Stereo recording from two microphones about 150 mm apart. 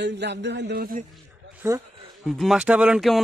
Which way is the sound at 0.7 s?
80° right.